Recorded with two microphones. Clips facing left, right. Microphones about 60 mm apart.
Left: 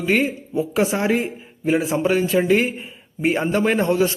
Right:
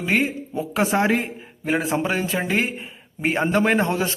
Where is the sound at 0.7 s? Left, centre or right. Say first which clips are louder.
Right 1 dB; right.